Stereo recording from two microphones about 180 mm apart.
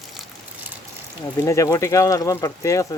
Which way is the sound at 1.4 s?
15° left (ahead or behind).